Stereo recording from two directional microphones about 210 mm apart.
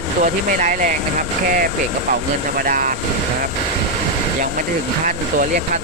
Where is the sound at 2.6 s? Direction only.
40° right (ahead or behind).